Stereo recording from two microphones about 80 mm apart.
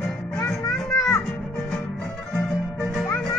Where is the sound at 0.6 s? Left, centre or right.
Left.